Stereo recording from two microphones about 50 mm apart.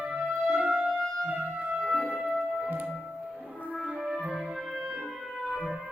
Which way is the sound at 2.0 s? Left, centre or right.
Centre.